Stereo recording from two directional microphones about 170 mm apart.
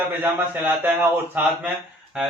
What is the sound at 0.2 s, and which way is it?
Speech, 10° right (ahead or behind).